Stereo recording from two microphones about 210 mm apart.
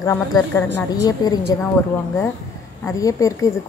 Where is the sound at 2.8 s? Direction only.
15° left (ahead or behind).